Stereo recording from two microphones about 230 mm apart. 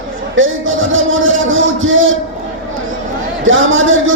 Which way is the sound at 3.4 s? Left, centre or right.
Right.